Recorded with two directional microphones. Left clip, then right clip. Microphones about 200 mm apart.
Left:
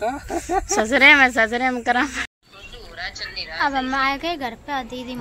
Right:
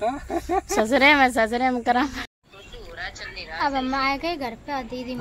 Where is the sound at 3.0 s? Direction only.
45° right (ahead or behind).